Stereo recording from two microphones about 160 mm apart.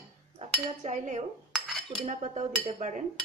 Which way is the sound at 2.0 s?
50° right (ahead or behind).